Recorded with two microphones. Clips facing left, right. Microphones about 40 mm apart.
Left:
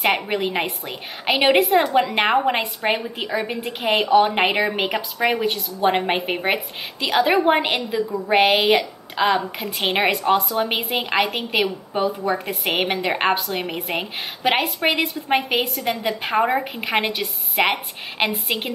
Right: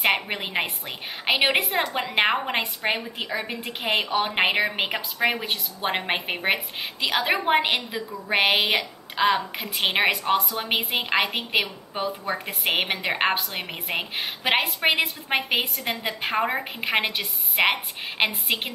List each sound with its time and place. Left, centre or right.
0.0 s a woman's voice: centre